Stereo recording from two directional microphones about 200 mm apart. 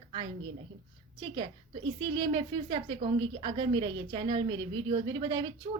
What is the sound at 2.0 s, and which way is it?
A woman's voice, 20° right (ahead or behind).